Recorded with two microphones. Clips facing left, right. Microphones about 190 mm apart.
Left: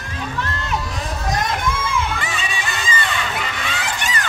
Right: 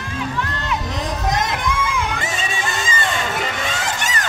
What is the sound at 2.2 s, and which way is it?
Crowd, 45° right (ahead or behind).